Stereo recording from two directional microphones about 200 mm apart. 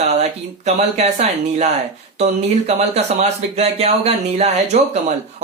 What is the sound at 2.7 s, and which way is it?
Speech, 30° right (ahead or behind).